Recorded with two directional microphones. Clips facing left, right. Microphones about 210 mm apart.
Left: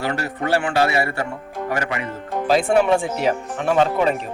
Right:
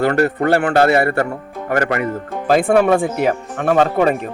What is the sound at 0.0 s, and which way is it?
Speech, 55° right (ahead or behind).